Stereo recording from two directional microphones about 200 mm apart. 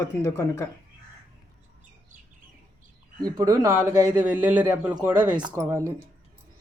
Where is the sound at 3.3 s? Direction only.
20° right (ahead or behind).